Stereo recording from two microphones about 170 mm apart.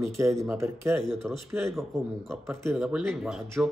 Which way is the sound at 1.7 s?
Centre (ahead or behind).